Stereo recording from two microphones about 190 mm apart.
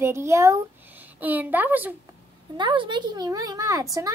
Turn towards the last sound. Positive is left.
turn(degrees=-15)  # may be behind; listen again after turning